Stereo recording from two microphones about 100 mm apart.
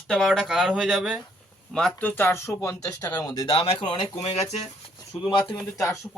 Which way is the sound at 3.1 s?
20° left (ahead or behind).